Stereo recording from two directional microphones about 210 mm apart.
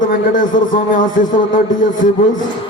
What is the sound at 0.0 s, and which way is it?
A man's voice, 40° left (ahead or behind).